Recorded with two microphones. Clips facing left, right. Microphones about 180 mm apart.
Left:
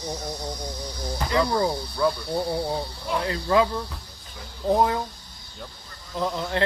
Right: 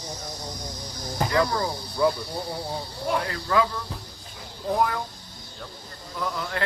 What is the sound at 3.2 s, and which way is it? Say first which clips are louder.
Speech: left 6 dB; 25° left (ahead or behind).